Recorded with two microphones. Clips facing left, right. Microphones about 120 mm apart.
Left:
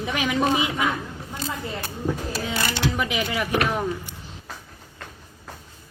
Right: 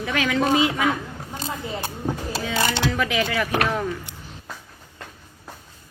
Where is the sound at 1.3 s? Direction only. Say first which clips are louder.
Even; 25° right (ahead or behind).